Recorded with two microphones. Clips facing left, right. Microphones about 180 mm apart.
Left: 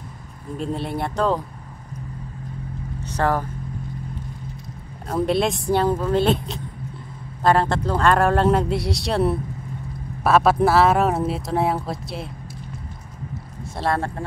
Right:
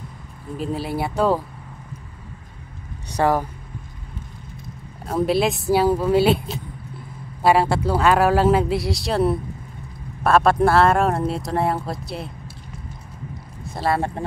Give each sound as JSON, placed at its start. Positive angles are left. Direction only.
{"t": 0.6, "sound": "speech", "side_deg": -5}
{"t": 3.1, "sound": "speech", "side_deg": -15}
{"t": 5.0, "sound": "speech", "side_deg": 0}
{"t": 13.7, "sound": "speech", "side_deg": -5}